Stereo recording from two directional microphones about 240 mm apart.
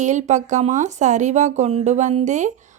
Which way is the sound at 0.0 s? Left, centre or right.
Right.